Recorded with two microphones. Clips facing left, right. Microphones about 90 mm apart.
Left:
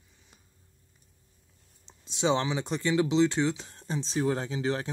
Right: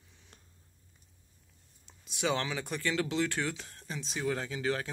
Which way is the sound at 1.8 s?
25° left (ahead or behind).